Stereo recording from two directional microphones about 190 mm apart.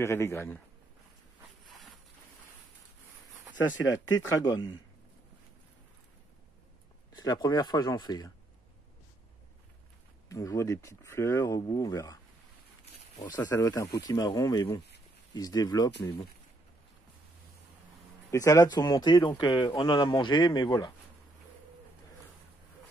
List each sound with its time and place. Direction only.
0.0 s speech: 15° left (ahead or behind)
3.9 s a man's voice: 20° left (ahead or behind)
7.2 s a man's voice: 20° left (ahead or behind)
10.2 s speech: 15° left (ahead or behind)
13.4 s a man's voice: 15° left (ahead or behind)
18.3 s a man's voice: 15° left (ahead or behind)